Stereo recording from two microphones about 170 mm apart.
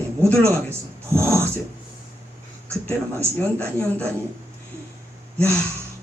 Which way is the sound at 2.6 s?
15° right (ahead or behind).